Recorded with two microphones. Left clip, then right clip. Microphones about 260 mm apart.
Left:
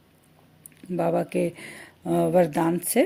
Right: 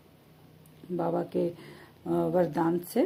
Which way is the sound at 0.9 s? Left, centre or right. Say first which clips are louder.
Left 5 dB; left.